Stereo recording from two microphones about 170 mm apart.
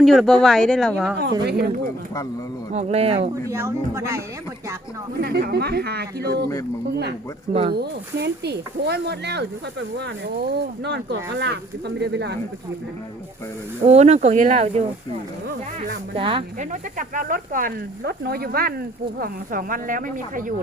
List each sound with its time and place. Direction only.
0.0 s speech: centre (ahead or behind)
1.5 s speech: 70° right (ahead or behind)
2.7 s speech: 35° right (ahead or behind)
3.5 s speech: 15° right (ahead or behind)
5.2 s speech: 70° right (ahead or behind)
7.7 s speech: 70° right (ahead or behind)
13.8 s speech: 40° right (ahead or behind)
16.1 s speech: 30° right (ahead or behind)
16.6 s speech: 50° right (ahead or behind)